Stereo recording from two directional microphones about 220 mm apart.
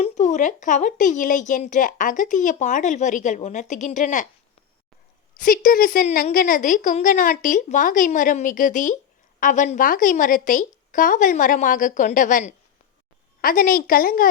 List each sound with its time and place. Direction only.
0.0 s a woman's voice: 35° left (ahead or behind)
5.3 s a woman's voice: 40° left (ahead or behind)